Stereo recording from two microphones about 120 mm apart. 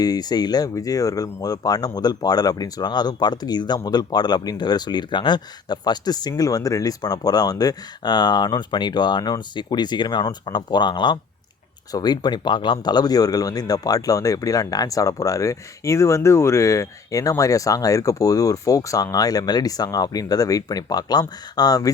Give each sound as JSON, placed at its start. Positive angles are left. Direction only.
{"t": 0.0, "sound": "speech", "side_deg": 35}